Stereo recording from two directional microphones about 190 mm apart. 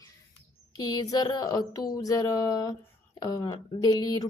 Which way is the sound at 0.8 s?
20° left (ahead or behind).